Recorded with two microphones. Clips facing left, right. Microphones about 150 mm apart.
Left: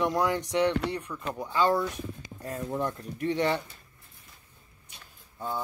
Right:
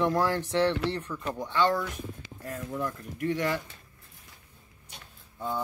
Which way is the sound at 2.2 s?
35° left (ahead or behind).